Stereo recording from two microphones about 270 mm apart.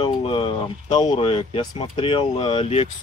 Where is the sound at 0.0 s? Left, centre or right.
Centre.